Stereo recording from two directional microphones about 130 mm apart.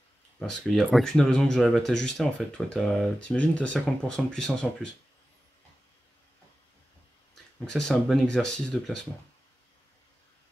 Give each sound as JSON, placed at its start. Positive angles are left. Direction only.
{"t": 0.4, "sound": "speech", "side_deg": 0}
{"t": 7.6, "sound": "speech", "side_deg": 5}